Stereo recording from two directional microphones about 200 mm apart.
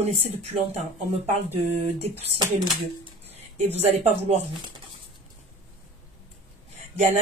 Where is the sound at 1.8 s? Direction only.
30° right (ahead or behind).